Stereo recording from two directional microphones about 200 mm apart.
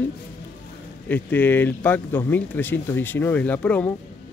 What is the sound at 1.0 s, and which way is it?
Speech, 10° left (ahead or behind).